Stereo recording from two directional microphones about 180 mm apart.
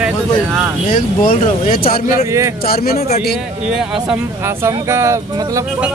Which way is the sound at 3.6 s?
5° right (ahead or behind).